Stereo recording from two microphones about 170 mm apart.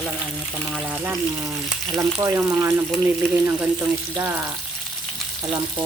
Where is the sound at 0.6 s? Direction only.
5° right (ahead or behind).